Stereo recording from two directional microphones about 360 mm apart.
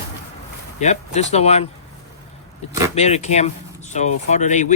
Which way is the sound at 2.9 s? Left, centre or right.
Centre.